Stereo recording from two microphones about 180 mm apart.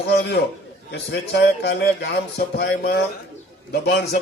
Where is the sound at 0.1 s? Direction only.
70° left (ahead or behind).